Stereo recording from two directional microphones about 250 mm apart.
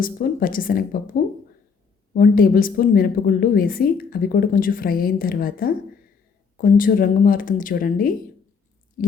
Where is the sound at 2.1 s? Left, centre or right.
Left.